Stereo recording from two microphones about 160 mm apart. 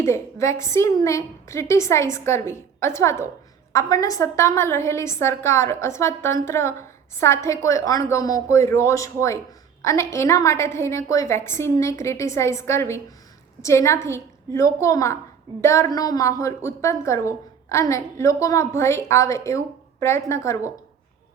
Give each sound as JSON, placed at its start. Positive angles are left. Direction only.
{"t": 0.0, "sound": "a woman's voice", "side_deg": 15}